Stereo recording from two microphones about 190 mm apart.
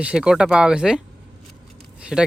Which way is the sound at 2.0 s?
5° right (ahead or behind).